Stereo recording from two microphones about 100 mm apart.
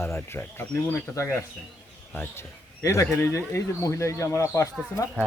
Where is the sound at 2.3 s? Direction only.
30° left (ahead or behind).